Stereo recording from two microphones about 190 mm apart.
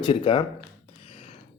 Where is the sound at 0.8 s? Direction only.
30° left (ahead or behind).